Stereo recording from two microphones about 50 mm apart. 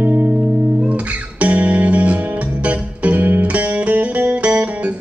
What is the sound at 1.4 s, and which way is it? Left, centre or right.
Music, right.